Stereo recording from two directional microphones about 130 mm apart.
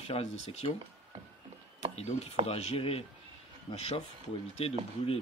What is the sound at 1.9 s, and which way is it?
Speech, 55° left (ahead or behind).